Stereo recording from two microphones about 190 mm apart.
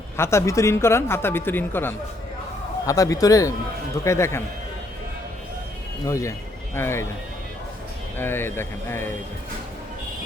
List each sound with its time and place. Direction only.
0.2 s a woman's voice: 15° left (ahead or behind)
6.1 s a woman's voice: 15° left (ahead or behind)
8.2 s a woman's voice: 10° left (ahead or behind)